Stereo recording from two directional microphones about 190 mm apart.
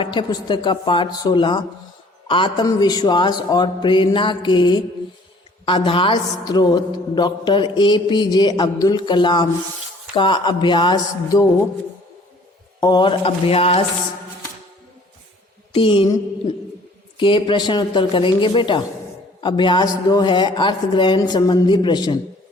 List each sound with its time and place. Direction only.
0.0 s a woman's voice: 25° left (ahead or behind)
12.8 s a woman's voice: 25° left (ahead or behind)
15.7 s a woman's voice: 30° left (ahead or behind)
17.2 s a woman's voice: 25° left (ahead or behind)